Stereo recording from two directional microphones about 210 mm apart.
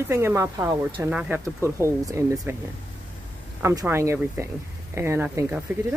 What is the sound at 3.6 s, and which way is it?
Speech, 15° right (ahead or behind).